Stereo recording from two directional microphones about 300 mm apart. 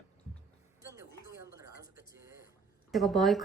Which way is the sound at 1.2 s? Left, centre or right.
Right.